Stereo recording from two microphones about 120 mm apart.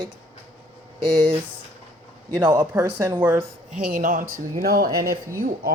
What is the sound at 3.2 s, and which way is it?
Speech, 15° right (ahead or behind).